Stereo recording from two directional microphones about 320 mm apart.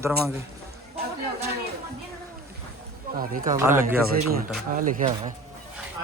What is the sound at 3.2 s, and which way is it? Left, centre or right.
Speech, right.